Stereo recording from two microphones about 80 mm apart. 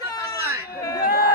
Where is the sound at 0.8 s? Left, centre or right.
Left.